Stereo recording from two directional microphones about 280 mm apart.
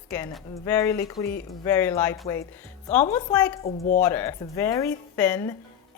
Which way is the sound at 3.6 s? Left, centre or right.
Left.